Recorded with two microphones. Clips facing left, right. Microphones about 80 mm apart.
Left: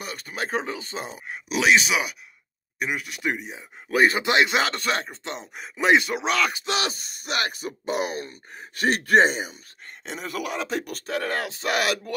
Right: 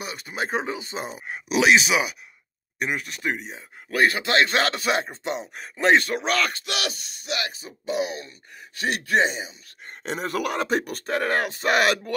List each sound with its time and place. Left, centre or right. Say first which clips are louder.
0.0 s a sound: right 1 dB; centre
0.4 s speech: right 1 dB; centre
3.9 s a man's voice: left 1 dB; centre
4.5 s speech: right 1 dB; centre
6.6 s a man's voice: left 3 dB; left
7.2 s speech: left 3 dB; left
9.8 s speech: right 5 dB; right